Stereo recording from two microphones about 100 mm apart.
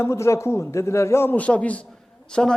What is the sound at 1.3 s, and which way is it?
Speech, 15° left (ahead or behind).